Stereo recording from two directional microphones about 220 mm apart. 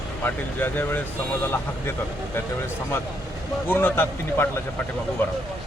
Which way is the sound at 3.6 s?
10° left (ahead or behind).